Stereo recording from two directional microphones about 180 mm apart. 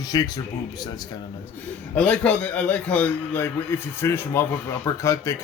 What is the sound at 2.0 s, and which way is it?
A man's voice, 5° left (ahead or behind).